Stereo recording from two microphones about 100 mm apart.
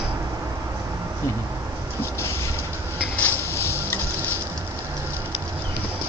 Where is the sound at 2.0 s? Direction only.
30° left (ahead or behind).